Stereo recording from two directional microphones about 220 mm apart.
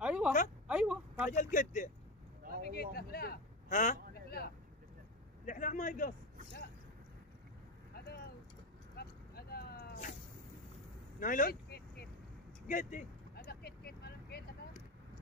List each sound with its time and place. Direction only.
0.0 s a sound: 5° right (ahead or behind)
1.3 s speech: 35° left (ahead or behind)
2.7 s vehicle: 45° left (ahead or behind)
8.9 s vehicle: 45° left (ahead or behind)
11.1 s vehicle: 35° left (ahead or behind)